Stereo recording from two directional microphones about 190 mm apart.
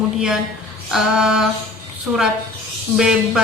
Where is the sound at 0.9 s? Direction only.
5° right (ahead or behind).